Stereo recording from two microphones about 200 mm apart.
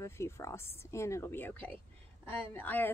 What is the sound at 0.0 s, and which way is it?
Speech, 15° left (ahead or behind).